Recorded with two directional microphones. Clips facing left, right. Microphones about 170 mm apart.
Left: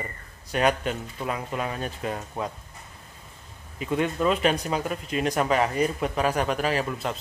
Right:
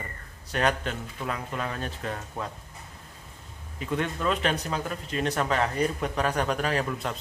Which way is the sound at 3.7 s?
10° left (ahead or behind).